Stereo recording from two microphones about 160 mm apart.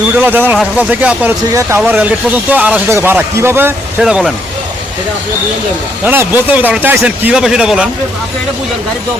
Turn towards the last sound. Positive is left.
turn(degrees=-5)  # may be behind; listen again after turning